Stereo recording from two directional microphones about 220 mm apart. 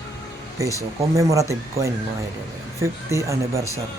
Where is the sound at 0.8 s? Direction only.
15° right (ahead or behind).